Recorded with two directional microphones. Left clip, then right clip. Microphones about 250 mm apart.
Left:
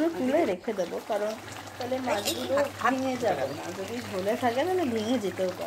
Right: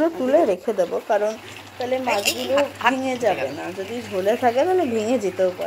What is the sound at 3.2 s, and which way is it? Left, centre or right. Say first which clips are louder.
Speech: right 7 dB; centre.